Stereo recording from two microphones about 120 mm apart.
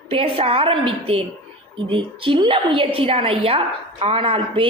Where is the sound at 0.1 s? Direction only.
50° right (ahead or behind).